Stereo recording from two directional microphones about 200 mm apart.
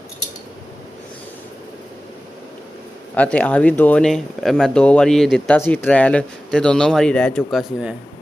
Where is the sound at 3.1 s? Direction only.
5° left (ahead or behind).